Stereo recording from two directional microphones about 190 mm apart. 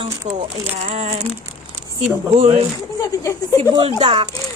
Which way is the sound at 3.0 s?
15° left (ahead or behind).